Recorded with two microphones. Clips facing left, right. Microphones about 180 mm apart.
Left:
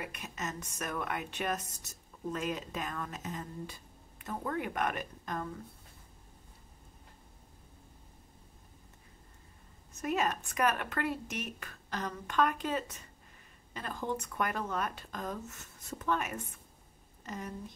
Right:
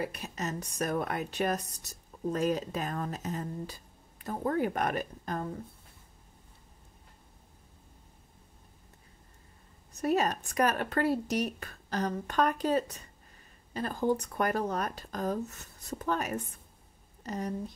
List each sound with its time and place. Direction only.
0.0 s speech: 35° right (ahead or behind)
9.9 s a woman's voice: 35° right (ahead or behind)